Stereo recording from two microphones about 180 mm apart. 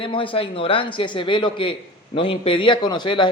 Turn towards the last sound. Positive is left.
turn(degrees=25)  # may be behind; listen again after turning